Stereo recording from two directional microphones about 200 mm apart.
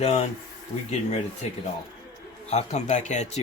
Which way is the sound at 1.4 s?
35° left (ahead or behind).